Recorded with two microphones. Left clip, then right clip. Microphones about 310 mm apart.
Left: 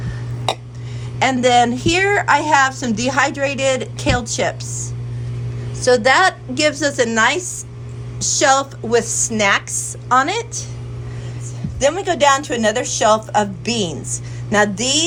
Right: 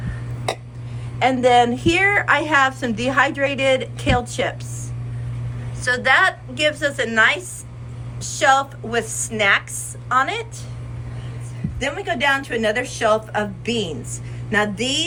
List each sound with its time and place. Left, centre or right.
1.2 s a woman's voice: left
11.8 s a woman's voice: centre